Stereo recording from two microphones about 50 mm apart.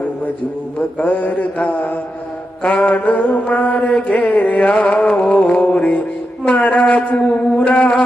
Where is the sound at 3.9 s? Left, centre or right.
Left.